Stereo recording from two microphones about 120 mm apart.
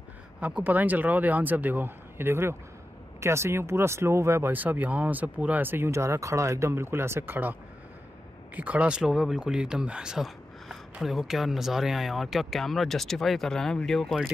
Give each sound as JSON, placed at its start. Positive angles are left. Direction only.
{"t": 0.4, "sound": "a man's voice", "side_deg": -10}
{"t": 8.5, "sound": "speech", "side_deg": -10}